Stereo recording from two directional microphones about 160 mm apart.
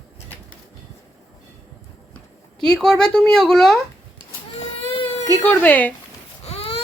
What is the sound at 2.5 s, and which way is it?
Speech, 5° left (ahead or behind).